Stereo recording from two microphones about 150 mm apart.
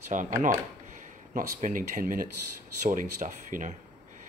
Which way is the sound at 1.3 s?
65° right (ahead or behind).